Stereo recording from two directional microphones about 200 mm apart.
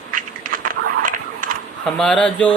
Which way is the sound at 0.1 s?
45° right (ahead or behind).